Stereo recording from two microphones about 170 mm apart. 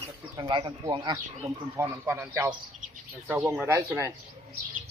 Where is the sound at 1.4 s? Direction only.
15° right (ahead or behind).